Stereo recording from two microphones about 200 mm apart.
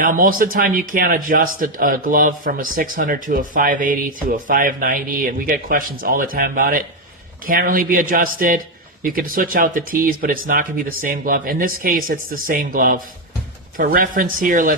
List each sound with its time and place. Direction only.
0.0 s a man's voice: 45° right (ahead or behind)